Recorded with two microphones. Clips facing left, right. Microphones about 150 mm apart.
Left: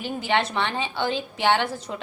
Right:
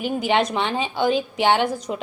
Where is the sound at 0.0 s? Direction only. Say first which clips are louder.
Right 4 dB; 15° right (ahead or behind).